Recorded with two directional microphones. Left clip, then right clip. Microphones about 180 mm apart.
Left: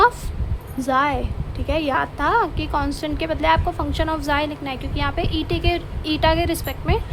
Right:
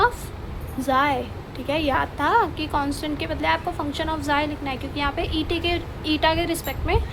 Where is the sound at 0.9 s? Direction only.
20° left (ahead or behind).